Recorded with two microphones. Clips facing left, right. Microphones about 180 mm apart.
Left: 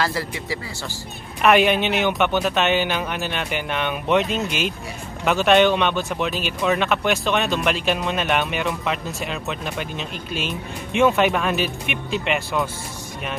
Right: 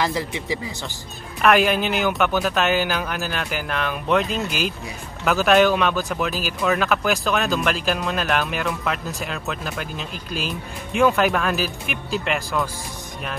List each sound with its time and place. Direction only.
0.0 s speech: 15° right (ahead or behind)
1.4 s speech: centre (ahead or behind)